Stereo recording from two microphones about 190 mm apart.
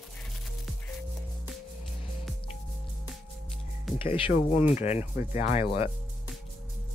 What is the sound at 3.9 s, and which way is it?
Speech, 25° left (ahead or behind).